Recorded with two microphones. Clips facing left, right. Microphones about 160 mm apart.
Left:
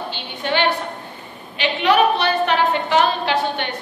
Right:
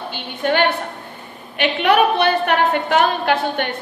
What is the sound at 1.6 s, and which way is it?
A woman's voice, 55° right (ahead or behind).